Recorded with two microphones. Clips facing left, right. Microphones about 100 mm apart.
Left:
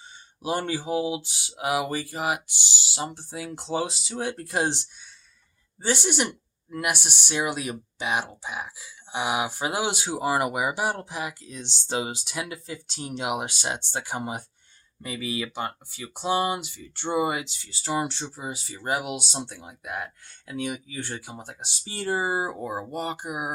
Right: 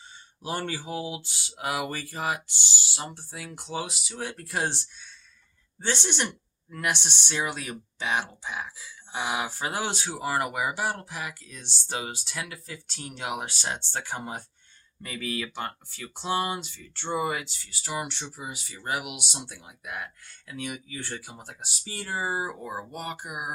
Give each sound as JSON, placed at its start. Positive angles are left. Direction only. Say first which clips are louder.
{"t": 0.4, "sound": "speech", "louder": "left 5 dB", "side_deg": 15}